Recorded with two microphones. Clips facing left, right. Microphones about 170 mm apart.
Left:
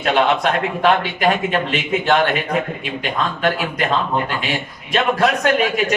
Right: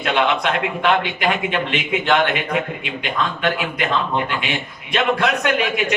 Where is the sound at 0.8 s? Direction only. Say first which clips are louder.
Left 3 dB; 40° left (ahead or behind).